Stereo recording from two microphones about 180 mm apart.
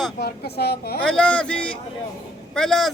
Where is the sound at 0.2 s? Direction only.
60° left (ahead or behind).